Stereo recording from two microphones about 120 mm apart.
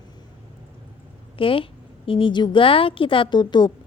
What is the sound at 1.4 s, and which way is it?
A woman's voice, 50° left (ahead or behind).